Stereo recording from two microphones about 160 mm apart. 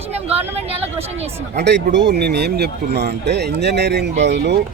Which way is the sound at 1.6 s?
90° right.